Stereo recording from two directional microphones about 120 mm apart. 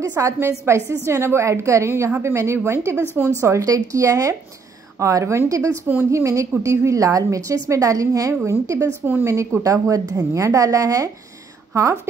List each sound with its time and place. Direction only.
0.0 s a woman's voice: 25° right (ahead or behind)
5.9 s a woman's voice: 15° right (ahead or behind)
6.2 s a woman's voice: 25° right (ahead or behind)